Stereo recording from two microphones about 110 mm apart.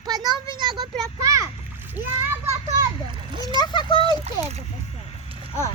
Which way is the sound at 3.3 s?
45° right (ahead or behind).